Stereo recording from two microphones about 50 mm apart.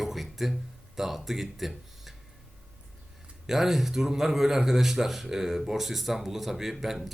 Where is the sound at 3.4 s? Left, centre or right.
Centre.